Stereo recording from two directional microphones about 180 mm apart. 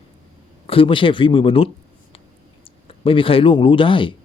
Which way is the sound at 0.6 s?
30° left (ahead or behind).